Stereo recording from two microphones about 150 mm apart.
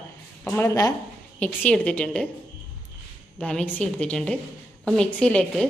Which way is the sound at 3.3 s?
5° left (ahead or behind).